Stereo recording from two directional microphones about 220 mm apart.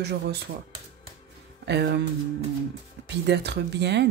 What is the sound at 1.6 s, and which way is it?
Speech, 50° right (ahead or behind).